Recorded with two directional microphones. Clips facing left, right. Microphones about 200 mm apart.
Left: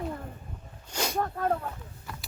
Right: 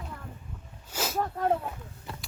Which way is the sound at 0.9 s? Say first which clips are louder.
Left 1 dB; 5° right (ahead or behind).